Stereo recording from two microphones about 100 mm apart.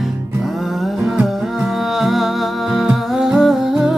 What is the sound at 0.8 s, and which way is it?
Music, 5° right (ahead or behind).